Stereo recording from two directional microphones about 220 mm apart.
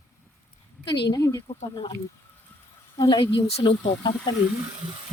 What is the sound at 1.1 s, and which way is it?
Speech, 15° left (ahead or behind).